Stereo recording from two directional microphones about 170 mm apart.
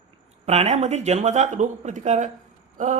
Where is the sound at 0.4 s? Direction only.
40° right (ahead or behind).